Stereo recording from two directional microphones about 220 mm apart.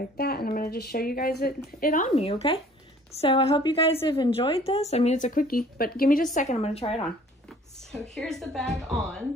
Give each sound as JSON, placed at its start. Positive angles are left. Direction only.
{"t": 0.2, "sound": "a woman's voice", "side_deg": 45}
{"t": 7.4, "sound": "a woman's voice", "side_deg": 0}